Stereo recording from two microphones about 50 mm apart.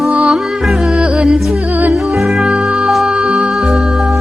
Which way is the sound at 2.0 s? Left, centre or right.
Centre.